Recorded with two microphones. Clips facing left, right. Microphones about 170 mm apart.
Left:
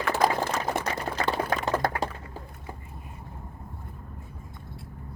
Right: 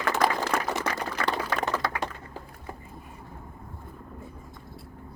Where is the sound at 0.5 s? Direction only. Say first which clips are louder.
Right 3 dB; 55° right (ahead or behind).